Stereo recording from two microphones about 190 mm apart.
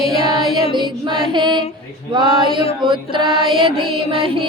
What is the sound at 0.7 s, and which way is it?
Music, 25° right (ahead or behind).